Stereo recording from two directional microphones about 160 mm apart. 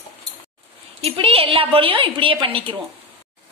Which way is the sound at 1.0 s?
40° right (ahead or behind).